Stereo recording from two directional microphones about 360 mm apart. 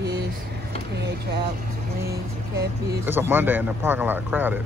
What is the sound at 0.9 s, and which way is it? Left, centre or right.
Speech, right.